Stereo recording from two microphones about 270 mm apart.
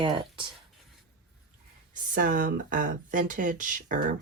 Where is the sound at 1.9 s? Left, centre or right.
Right.